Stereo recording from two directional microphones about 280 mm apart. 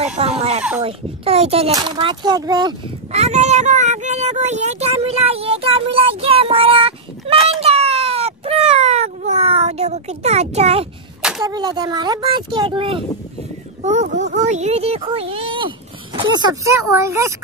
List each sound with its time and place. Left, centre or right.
0.0 s a child's voice: right
7.6 s baby cry: right
11.4 s a child's voice: centre